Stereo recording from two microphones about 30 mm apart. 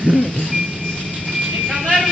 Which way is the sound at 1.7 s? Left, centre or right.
Centre.